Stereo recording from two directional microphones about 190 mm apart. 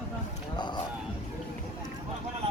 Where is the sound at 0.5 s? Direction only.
25° left (ahead or behind).